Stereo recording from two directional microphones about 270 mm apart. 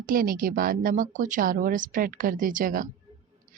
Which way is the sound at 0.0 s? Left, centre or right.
Right.